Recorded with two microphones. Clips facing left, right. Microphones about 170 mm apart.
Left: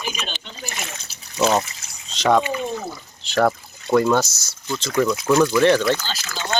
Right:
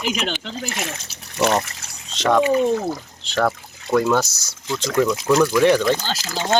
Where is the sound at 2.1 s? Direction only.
5° left (ahead or behind).